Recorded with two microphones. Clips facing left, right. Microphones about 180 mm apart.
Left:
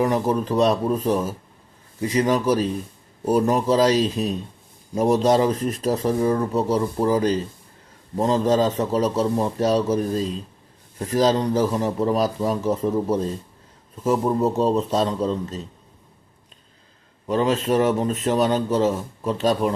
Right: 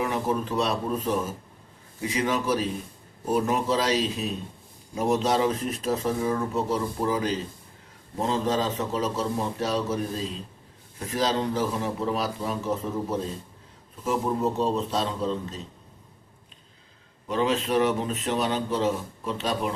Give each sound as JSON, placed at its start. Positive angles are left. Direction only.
{"t": 0.0, "sound": "speech", "side_deg": 40}
{"t": 14.6, "sound": "speech", "side_deg": 45}
{"t": 17.2, "sound": "speech", "side_deg": 40}